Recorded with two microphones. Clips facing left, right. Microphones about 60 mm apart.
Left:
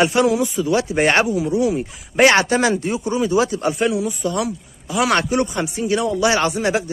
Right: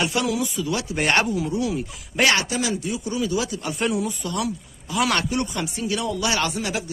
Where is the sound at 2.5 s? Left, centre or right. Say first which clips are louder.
Left 7 dB; left.